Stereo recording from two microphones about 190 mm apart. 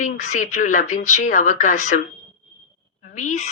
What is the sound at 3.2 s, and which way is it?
Speech, 40° left (ahead or behind).